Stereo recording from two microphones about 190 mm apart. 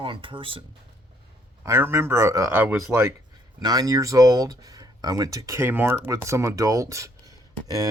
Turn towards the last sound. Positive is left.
turn(degrees=-15)  # may be behind; listen again after turning